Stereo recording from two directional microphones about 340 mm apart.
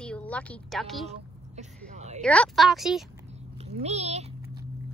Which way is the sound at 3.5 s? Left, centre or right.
Centre.